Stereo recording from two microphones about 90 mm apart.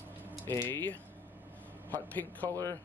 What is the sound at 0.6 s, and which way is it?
Speech, 20° left (ahead or behind).